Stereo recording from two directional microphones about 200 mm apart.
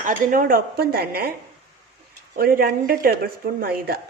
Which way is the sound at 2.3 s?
45° right (ahead or behind).